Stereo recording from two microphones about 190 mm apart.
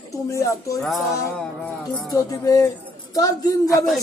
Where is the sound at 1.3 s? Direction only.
5° left (ahead or behind).